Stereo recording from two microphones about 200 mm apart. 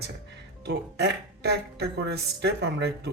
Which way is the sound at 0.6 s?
55° right (ahead or behind).